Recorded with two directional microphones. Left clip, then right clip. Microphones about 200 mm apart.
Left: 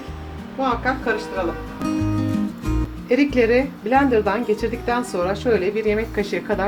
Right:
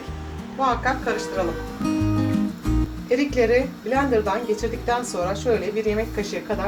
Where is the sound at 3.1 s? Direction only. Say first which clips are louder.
Left 2 dB; 40° left (ahead or behind).